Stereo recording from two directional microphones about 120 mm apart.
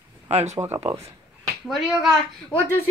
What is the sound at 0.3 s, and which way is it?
Speech, 65° right (ahead or behind).